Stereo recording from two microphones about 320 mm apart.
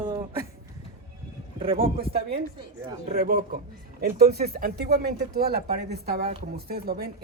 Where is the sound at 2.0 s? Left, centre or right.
Right.